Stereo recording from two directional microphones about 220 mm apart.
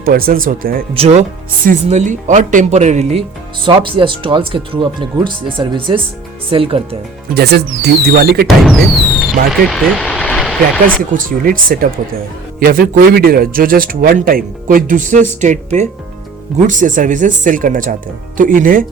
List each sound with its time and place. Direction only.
0.0 s a man's voice: 40° right (ahead or behind)
0.9 s a man's voice: 30° right (ahead or behind)
7.3 s speech: 45° right (ahead or behind)
8.4 s speech: centre (ahead or behind)
11.1 s a man's voice: 35° right (ahead or behind)